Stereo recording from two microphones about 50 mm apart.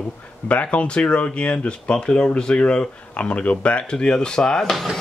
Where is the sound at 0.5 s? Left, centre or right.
Left.